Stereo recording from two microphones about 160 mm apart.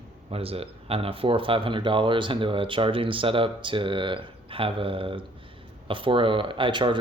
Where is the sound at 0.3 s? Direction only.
35° right (ahead or behind).